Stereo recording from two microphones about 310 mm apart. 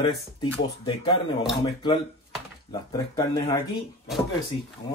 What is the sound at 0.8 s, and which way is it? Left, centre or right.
Speech, centre.